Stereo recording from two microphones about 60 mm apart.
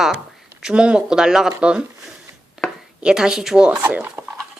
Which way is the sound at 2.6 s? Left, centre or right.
Centre.